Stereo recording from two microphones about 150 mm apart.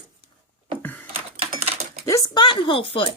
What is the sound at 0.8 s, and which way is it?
Typing, 10° left (ahead or behind).